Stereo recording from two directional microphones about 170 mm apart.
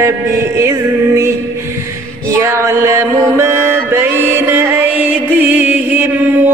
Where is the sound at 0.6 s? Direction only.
15° right (ahead or behind).